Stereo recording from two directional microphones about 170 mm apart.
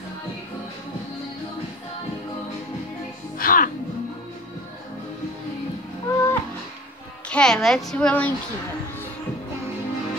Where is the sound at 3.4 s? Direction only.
55° left (ahead or behind).